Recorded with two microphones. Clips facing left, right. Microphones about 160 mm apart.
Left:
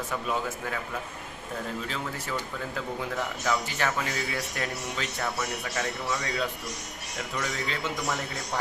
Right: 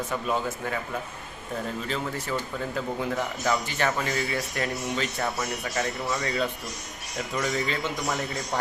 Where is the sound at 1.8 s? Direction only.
Centre (ahead or behind).